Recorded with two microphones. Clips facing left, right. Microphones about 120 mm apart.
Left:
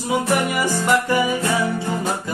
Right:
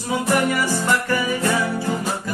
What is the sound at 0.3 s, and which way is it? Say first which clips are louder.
Music: right 4 dB; 20° left (ahead or behind).